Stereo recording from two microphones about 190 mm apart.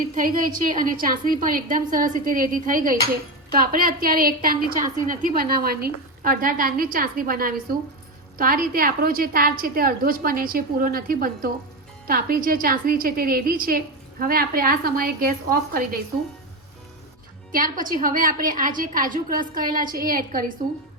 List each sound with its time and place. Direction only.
0.1 s a woman's voice: 45° right (ahead or behind)
17.5 s a woman's voice: 45° right (ahead or behind)